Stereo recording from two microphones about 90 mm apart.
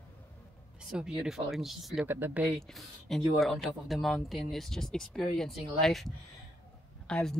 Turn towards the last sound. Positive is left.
turn(degrees=10)  # may be behind; listen again after turning